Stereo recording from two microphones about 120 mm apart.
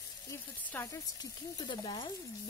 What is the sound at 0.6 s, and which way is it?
Speech, 20° left (ahead or behind).